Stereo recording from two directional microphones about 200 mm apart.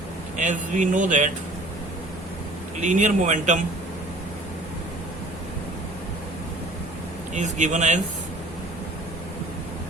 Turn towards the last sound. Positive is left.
turn(degrees=-35)  # may be behind; listen again after turning